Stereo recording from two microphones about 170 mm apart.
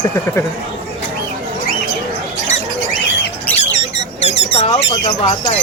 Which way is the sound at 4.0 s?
40° left (ahead or behind).